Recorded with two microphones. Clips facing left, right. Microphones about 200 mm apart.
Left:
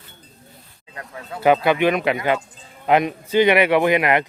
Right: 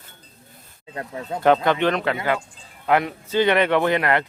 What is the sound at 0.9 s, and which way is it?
Speech, 30° right (ahead or behind).